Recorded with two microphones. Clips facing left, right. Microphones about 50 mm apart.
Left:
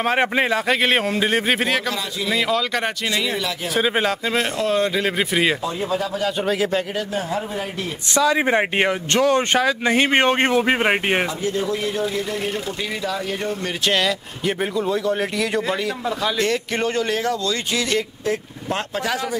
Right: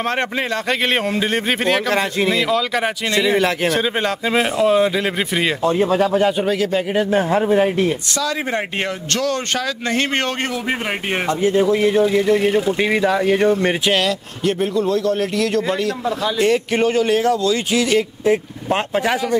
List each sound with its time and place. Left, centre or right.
0.0 s a man's voice: centre
3.7 s a man's voice: centre
4.3 s a man's voice: centre
5.7 s speech: right
6.4 s a man's voice: centre
7.0 s speech: right
8.2 s speech: centre
11.7 s a man's voice: right
12.9 s speech: right
13.8 s a man's voice: centre
14.4 s a man's voice: centre
16.3 s a man's voice: centre
18.2 s speech: right